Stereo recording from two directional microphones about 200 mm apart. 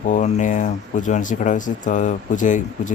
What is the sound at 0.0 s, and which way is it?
Speech, 35° left (ahead or behind).